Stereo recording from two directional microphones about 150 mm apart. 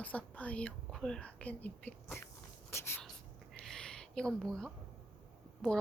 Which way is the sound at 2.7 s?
15° left (ahead or behind).